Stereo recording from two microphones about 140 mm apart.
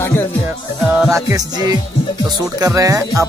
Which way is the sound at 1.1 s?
25° right (ahead or behind).